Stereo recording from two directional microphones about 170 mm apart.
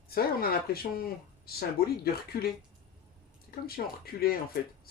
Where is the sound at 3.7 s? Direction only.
65° left (ahead or behind).